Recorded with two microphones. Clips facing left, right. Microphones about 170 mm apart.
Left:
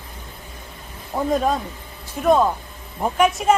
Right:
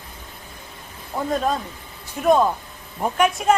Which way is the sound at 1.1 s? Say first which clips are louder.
Left 2 dB; 5° left (ahead or behind).